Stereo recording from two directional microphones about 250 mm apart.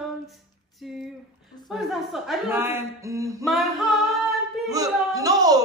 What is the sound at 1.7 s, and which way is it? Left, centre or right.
A woman's voice, centre.